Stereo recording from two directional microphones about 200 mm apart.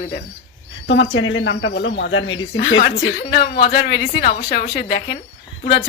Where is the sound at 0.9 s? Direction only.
70° left (ahead or behind).